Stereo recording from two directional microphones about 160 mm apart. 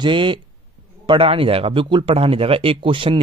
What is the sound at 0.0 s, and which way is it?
A man's voice, 30° right (ahead or behind).